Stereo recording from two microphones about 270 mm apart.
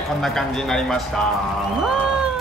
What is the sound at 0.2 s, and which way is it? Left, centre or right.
Speech, centre.